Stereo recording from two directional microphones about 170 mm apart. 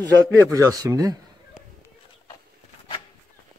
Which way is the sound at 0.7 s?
20° right (ahead or behind).